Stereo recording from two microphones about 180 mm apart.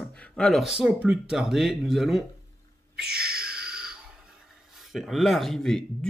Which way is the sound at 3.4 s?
5° right (ahead or behind).